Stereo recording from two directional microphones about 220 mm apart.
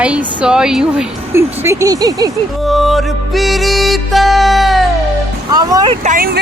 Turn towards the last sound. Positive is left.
turn(degrees=-40)  # may be behind; listen again after turning